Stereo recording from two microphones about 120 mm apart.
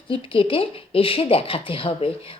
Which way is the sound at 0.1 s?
50° left (ahead or behind).